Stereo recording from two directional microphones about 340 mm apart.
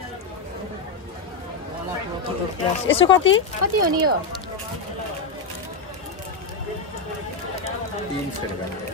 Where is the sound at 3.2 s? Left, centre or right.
Left.